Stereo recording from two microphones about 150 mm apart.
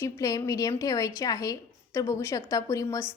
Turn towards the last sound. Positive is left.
turn(degrees=20)  # may be behind; listen again after turning